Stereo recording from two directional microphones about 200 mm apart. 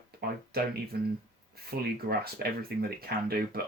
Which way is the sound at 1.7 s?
50° right (ahead or behind).